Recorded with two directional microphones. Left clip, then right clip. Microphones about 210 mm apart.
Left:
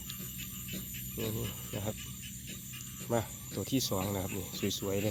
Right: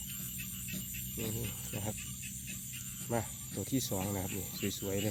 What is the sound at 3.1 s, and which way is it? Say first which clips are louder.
Speech: left 4 dB; centre (ahead or behind).